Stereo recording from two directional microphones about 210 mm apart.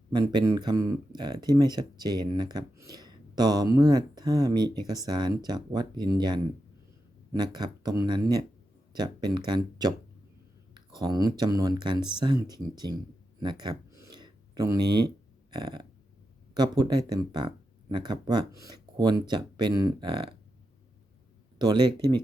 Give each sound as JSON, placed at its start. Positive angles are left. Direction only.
{"t": 0.1, "sound": "speech", "side_deg": -20}
{"t": 13.4, "sound": "a sound", "side_deg": -20}
{"t": 16.6, "sound": "speech", "side_deg": -20}
{"t": 21.6, "sound": "speech", "side_deg": -20}